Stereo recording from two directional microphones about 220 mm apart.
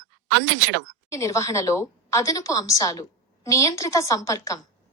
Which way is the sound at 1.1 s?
15° left (ahead or behind).